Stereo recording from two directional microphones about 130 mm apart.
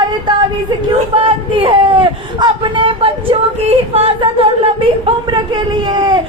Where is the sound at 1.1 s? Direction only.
45° right (ahead or behind).